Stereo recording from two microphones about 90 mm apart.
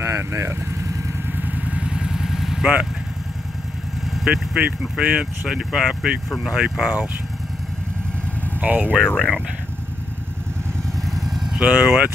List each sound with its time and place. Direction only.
0.0 s speech: 30° right (ahead or behind)
1.3 s vehicle: 15° right (ahead or behind)
4.6 s speech: 15° right (ahead or behind)
8.5 s speech: 20° right (ahead or behind)
8.9 s speech: 10° left (ahead or behind)
11.1 s vehicle: centre (ahead or behind)
11.6 s speech: 15° right (ahead or behind)